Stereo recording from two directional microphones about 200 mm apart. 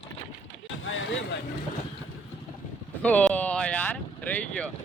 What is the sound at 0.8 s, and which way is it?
Speech, 75° left (ahead or behind).